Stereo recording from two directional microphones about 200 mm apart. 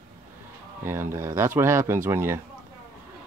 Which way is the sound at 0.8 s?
15° right (ahead or behind).